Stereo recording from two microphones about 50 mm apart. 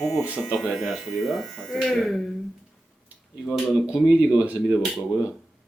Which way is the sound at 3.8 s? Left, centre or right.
Centre.